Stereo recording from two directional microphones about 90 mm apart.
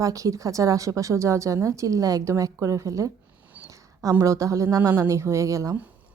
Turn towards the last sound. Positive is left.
turn(degrees=-35)  # may be behind; listen again after turning